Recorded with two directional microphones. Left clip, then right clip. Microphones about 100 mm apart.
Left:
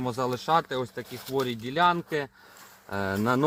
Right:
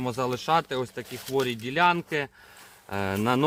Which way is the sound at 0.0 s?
5° left (ahead or behind).